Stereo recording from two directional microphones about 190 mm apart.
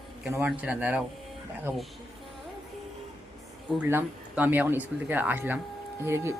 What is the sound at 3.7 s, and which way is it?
Speech, 10° right (ahead or behind).